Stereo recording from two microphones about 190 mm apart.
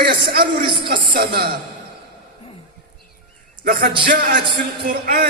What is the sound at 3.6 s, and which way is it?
A man's voice, 55° right (ahead or behind).